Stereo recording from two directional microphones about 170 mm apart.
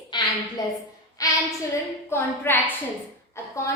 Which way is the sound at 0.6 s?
20° left (ahead or behind).